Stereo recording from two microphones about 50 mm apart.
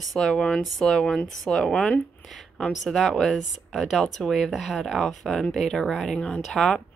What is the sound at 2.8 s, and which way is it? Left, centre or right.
A woman's voice, centre.